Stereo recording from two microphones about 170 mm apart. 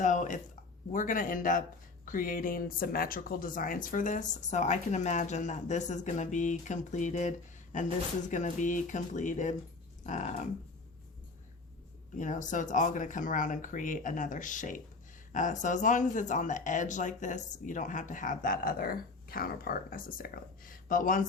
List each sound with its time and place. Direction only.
0.0 s a sound: 50° left (ahead or behind)
0.9 s speech: 50° left (ahead or behind)
12.1 s speech: 45° left (ahead or behind)